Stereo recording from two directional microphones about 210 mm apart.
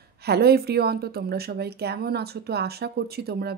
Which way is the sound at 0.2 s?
50° right (ahead or behind).